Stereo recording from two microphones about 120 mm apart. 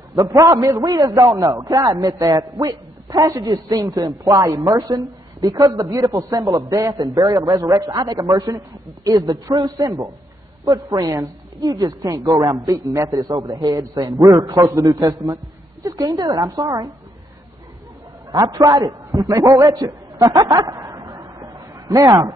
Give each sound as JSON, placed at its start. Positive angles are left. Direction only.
{"t": 0.1, "sound": "a man's voice", "side_deg": -30}
{"t": 18.3, "sound": "a man's voice", "side_deg": -30}